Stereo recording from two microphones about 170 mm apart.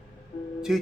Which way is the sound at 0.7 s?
5° right (ahead or behind).